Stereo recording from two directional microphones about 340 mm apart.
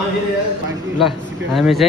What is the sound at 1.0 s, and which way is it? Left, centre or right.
Speech, centre.